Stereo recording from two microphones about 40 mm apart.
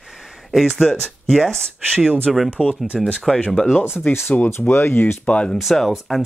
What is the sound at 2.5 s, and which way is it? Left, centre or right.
Speech, right.